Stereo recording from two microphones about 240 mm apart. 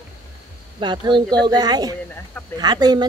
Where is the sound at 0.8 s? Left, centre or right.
Centre.